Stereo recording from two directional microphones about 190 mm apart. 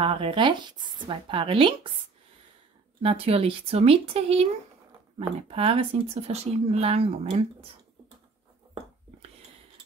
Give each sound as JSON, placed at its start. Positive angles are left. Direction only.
{"t": 0.0, "sound": "speech", "side_deg": -25}
{"t": 3.0, "sound": "speech", "side_deg": -30}
{"t": 5.5, "sound": "speech", "side_deg": -30}